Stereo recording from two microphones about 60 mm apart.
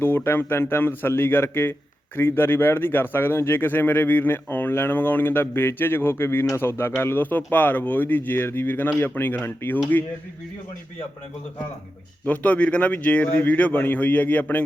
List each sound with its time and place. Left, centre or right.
0.0 s speech: left
6.6 s speech: left
12.2 s a man's voice: left